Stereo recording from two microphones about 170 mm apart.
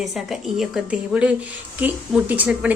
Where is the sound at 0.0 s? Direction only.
Centre (ahead or behind).